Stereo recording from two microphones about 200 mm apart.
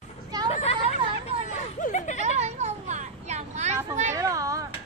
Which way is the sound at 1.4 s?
40° left (ahead or behind).